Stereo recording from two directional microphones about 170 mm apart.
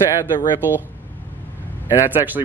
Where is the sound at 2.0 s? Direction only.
10° right (ahead or behind).